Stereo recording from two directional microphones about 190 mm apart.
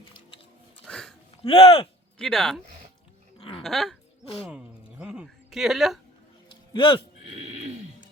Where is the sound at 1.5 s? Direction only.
30° left (ahead or behind).